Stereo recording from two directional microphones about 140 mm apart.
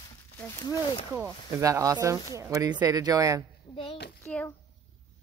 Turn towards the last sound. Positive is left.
turn(degrees=10)  # may be behind; listen again after turning